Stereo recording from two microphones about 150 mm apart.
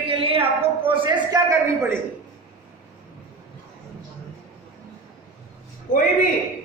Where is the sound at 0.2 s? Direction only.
40° right (ahead or behind).